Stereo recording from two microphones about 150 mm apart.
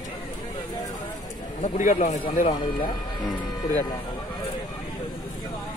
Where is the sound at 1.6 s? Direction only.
60° left (ahead or behind).